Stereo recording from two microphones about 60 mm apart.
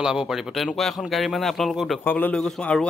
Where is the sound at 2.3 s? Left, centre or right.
Centre.